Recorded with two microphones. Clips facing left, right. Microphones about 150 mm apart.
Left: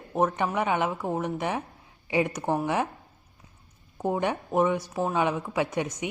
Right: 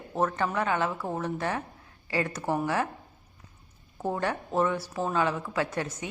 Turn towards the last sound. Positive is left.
turn(degrees=15)  # may be behind; listen again after turning